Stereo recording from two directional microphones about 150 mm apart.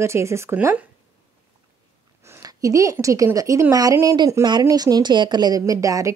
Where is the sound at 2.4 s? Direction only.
20° right (ahead or behind).